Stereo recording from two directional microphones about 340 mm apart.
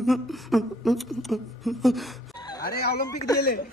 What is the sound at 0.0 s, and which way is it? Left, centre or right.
A woman's voice, centre.